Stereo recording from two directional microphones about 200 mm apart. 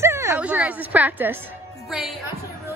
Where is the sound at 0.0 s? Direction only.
15° right (ahead or behind).